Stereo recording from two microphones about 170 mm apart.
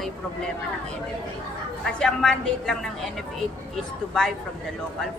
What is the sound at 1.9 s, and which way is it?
A woman's voice, 5° left (ahead or behind).